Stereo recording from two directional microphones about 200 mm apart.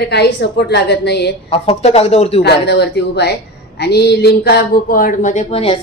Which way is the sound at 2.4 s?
55° left (ahead or behind).